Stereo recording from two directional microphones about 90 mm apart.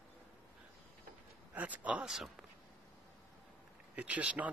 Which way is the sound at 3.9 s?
15° right (ahead or behind).